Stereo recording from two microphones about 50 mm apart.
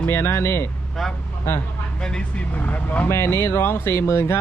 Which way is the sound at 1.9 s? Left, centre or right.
Centre.